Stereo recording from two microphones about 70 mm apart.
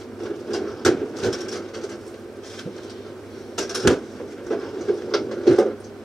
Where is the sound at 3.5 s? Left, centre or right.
Centre.